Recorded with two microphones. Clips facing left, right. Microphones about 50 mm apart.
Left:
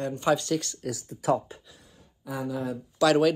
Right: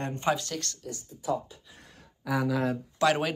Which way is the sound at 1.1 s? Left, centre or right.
Left.